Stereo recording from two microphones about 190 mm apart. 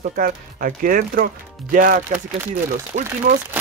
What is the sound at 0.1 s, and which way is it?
Speech, 45° right (ahead or behind).